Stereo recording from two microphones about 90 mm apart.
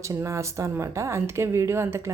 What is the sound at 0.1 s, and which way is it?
Speech, 35° right (ahead or behind).